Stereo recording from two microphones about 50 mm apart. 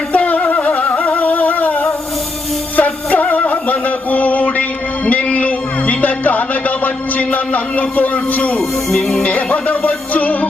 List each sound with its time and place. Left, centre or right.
0.1 s a sound: left
2.7 s music: left
8.5 s music: centre
9.2 s music: left